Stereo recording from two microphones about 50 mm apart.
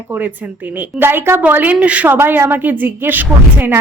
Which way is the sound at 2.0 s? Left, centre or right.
Right.